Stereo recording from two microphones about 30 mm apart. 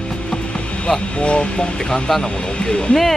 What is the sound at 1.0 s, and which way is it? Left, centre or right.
Speech, left.